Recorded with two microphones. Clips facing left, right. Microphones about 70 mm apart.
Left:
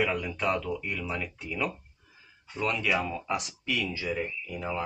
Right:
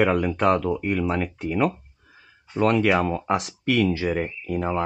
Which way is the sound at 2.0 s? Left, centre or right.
Right.